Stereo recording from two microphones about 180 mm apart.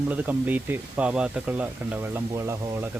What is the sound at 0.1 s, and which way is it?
Speech, 10° right (ahead or behind).